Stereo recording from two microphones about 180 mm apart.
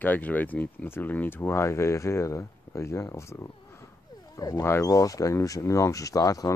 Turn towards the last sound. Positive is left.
turn(degrees=20)  # may be behind; listen again after turning